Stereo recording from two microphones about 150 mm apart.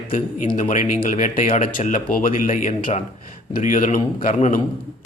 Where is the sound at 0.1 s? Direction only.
60° left (ahead or behind).